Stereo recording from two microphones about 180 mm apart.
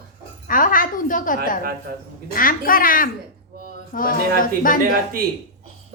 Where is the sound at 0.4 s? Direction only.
50° left (ahead or behind).